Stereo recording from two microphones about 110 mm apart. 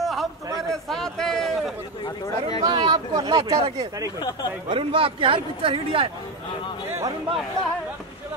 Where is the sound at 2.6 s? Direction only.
45° right (ahead or behind).